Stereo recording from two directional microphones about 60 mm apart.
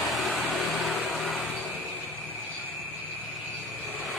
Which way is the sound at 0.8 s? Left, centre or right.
Centre.